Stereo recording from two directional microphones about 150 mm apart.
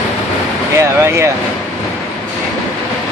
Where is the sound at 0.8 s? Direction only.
20° right (ahead or behind).